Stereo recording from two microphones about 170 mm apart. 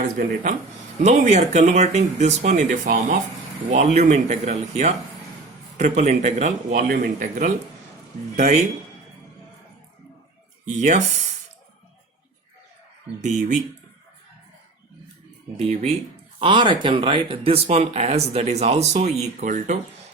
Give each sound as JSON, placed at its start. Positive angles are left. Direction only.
{"t": 0.0, "sound": "speech", "side_deg": -55}
{"t": 1.0, "sound": "speech", "side_deg": -45}
{"t": 10.7, "sound": "speech", "side_deg": -45}
{"t": 15.5, "sound": "speech", "side_deg": -40}